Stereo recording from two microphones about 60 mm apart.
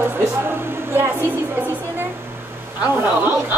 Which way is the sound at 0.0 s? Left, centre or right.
Right.